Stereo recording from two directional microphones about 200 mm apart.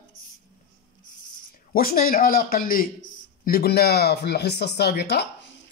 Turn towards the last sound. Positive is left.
turn(degrees=55)  # may be behind; listen again after turning